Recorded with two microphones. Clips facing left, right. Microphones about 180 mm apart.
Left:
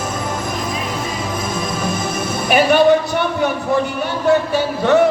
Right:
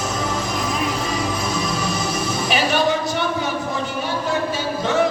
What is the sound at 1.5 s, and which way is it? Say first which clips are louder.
Music: left 2 dB; 50° left (ahead or behind).